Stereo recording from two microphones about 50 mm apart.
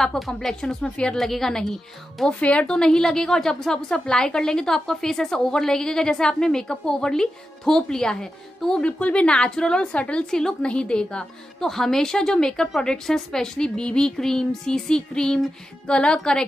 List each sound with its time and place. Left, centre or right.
0.3 s a woman's voice: centre
1.1 s a woman's voice: centre
2.4 s a woman's voice: left
8.8 s a woman's voice: left
11.6 s a woman's voice: centre